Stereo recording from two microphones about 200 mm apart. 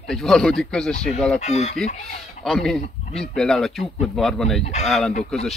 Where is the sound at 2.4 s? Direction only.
Centre (ahead or behind).